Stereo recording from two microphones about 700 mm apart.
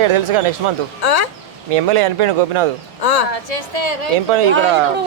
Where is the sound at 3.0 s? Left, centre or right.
Left.